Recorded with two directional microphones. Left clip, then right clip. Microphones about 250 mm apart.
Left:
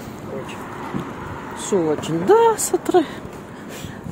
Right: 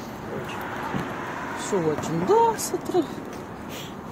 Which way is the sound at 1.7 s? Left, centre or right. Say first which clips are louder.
Left 6 dB; left.